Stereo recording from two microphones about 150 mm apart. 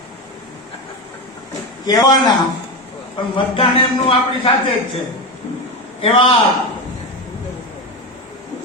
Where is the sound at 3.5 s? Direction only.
40° left (ahead or behind).